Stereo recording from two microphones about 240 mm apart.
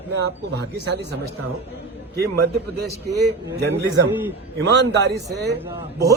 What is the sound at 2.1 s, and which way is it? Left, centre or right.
A man's voice, right.